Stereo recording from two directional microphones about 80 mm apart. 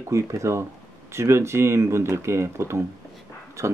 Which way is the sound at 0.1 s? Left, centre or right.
Right.